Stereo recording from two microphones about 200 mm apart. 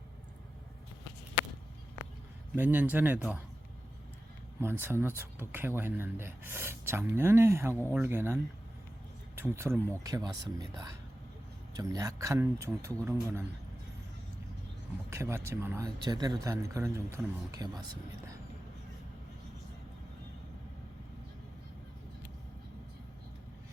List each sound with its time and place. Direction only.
2.6 s speech: 10° right (ahead or behind)
4.6 s speech: 10° right (ahead or behind)
15.1 s speech: 15° right (ahead or behind)